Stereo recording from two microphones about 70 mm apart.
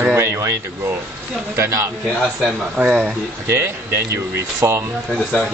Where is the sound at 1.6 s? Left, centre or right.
Right.